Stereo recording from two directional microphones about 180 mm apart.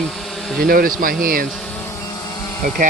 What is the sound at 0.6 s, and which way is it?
Speech, 55° right (ahead or behind).